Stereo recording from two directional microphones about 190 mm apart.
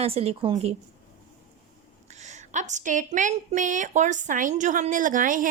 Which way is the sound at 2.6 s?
40° right (ahead or behind).